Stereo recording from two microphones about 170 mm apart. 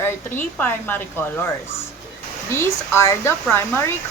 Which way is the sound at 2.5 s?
15° left (ahead or behind).